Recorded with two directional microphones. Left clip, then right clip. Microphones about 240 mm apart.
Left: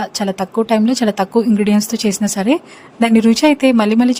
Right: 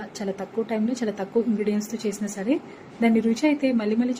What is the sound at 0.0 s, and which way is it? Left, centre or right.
A woman's voice, left.